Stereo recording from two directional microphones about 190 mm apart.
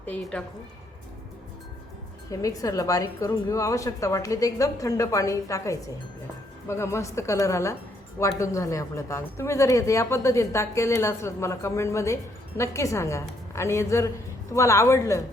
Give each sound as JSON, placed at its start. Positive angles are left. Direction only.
{"t": 0.0, "sound": "a woman's voice", "side_deg": 5}
{"t": 2.3, "sound": "speech", "side_deg": 15}